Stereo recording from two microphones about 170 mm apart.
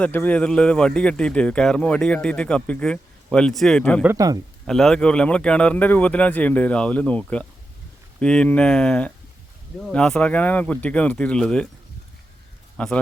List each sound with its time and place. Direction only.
0.0 s speech: 10° left (ahead or behind)
4.0 s a man's voice: 15° right (ahead or behind)
4.6 s speech: centre (ahead or behind)
12.7 s a man's voice: 5° left (ahead or behind)